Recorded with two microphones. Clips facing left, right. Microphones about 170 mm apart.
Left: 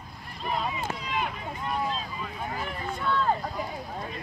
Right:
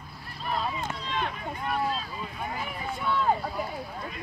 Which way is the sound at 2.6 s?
5° right (ahead or behind).